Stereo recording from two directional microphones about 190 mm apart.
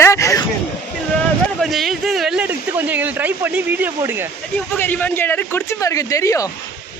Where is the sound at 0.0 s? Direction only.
15° left (ahead or behind).